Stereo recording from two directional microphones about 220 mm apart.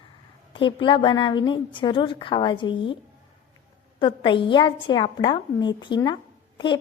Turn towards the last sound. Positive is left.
turn(degrees=20)  # may be behind; listen again after turning